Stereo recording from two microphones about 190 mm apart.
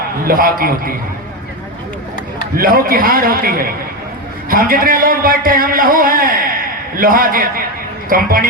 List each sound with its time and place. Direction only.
0.3 s a man's voice: 50° right (ahead or behind)
2.6 s a man's voice: 50° right (ahead or behind)